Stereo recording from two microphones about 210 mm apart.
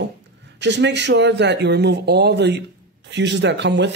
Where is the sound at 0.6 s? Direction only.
55° right (ahead or behind).